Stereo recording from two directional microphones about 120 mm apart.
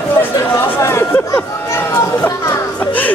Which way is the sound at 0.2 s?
20° left (ahead or behind).